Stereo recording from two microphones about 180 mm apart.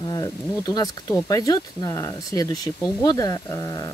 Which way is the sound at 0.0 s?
20° left (ahead or behind).